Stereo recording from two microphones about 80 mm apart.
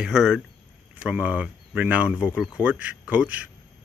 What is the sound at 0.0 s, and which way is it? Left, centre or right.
Speech, centre.